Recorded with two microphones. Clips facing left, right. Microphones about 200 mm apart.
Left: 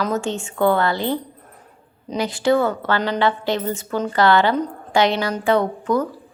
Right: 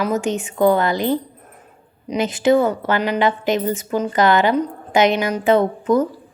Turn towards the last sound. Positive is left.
turn(degrees=-20)  # may be behind; listen again after turning